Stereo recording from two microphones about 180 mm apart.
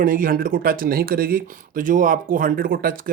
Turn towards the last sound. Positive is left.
turn(degrees=-50)  # may be behind; listen again after turning